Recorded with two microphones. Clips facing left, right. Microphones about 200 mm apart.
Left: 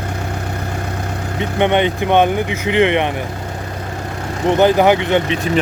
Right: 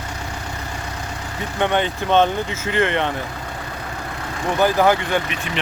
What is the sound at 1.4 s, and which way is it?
Speech, 20° left (ahead or behind).